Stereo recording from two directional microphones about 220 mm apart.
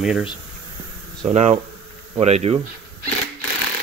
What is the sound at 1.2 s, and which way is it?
Speech, 30° right (ahead or behind).